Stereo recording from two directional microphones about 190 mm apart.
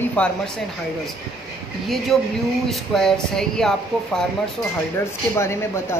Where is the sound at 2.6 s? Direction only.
Centre (ahead or behind).